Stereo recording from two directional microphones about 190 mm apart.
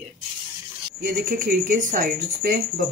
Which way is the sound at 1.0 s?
45° right (ahead or behind).